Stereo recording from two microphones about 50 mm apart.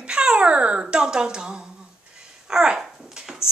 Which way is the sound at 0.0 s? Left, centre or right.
Centre.